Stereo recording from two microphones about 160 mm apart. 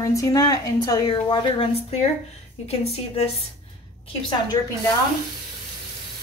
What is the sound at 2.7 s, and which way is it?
Speech, 40° left (ahead or behind).